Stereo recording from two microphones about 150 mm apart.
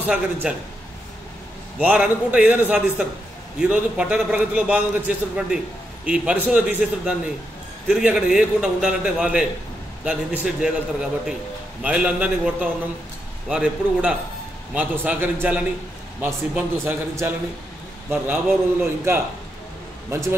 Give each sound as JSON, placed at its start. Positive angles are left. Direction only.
{"t": 0.0, "sound": "a man's voice", "side_deg": -10}
{"t": 1.8, "sound": "a man's voice", "side_deg": -10}